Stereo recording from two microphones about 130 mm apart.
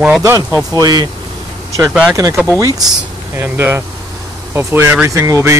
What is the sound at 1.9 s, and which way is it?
Speech, 5° right (ahead or behind).